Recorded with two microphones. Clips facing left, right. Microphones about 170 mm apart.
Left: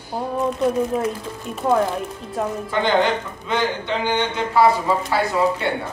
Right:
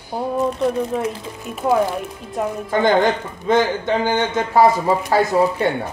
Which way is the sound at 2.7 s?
45° right (ahead or behind).